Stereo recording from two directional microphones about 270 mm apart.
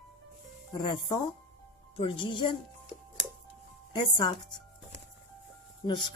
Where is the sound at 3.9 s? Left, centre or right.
Centre.